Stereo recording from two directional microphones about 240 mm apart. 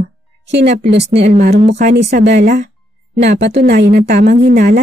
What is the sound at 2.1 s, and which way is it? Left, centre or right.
Speech, right.